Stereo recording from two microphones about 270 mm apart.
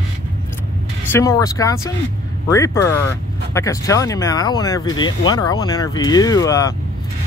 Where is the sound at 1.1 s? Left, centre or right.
Centre.